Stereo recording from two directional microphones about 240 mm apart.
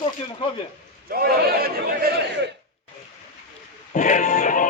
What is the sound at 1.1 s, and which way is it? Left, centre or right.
Speech, right.